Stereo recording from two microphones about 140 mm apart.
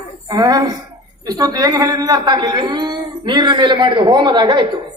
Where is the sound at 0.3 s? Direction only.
25° right (ahead or behind).